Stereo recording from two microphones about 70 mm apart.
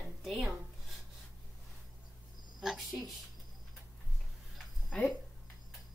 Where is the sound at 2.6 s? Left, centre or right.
Centre.